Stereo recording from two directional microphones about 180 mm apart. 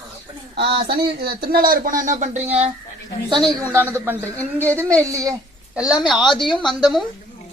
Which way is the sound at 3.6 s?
15° right (ahead or behind).